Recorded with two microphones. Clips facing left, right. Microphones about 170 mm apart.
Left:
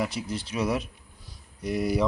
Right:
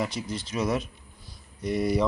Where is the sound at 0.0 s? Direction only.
5° left (ahead or behind).